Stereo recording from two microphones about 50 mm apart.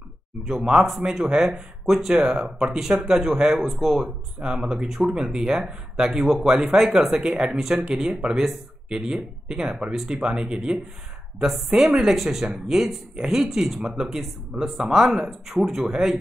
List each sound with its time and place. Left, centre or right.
1.0 s speech: centre